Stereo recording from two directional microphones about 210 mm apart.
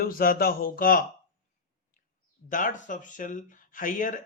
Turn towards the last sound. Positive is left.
turn(degrees=40)  # may be behind; listen again after turning